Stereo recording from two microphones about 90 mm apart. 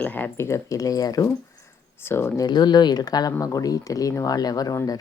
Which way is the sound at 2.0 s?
25° left (ahead or behind).